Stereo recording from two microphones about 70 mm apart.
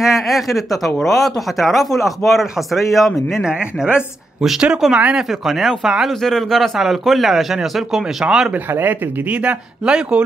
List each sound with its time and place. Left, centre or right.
0.0 s speech: centre
3.4 s speech: centre
8.7 s speech: right